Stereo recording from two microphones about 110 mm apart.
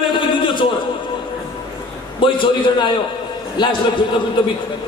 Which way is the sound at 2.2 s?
50° left (ahead or behind).